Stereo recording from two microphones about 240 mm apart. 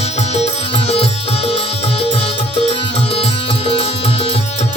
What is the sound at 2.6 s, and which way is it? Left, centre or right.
Music, left.